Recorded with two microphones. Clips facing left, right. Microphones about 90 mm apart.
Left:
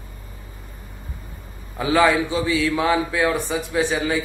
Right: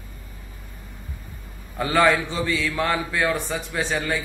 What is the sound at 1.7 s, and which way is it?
A man's voice, 5° left (ahead or behind).